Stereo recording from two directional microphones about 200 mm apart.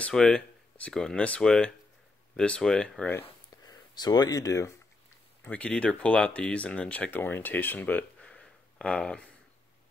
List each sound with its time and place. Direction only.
0.0 s speech: 5° left (ahead or behind)
3.9 s speech: 20° left (ahead or behind)
5.4 s speech: 5° left (ahead or behind)